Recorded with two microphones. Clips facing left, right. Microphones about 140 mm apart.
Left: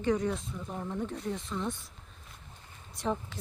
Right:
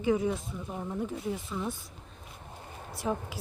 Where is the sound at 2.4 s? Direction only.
70° right (ahead or behind).